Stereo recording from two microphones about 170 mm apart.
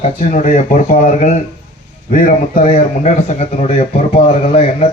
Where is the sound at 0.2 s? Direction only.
50° left (ahead or behind).